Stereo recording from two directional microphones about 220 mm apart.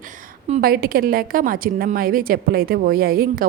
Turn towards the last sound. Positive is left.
turn(degrees=-40)  # may be behind; listen again after turning